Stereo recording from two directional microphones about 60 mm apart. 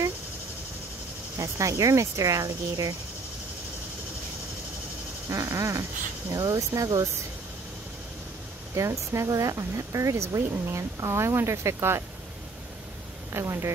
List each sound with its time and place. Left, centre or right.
1.4 s speech: right
5.3 s speech: right
6.3 s speech: right
8.7 s speech: right
13.3 s speech: right